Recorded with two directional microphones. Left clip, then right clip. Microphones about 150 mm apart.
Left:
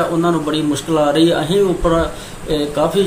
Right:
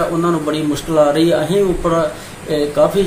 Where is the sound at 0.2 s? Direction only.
5° left (ahead or behind).